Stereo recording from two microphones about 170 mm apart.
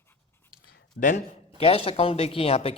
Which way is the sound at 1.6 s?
35° left (ahead or behind).